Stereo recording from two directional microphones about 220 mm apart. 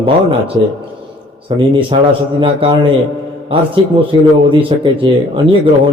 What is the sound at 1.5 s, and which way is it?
A man's voice, 20° right (ahead or behind).